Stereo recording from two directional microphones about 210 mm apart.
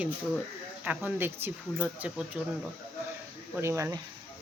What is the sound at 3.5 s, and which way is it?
Speech, 15° right (ahead or behind).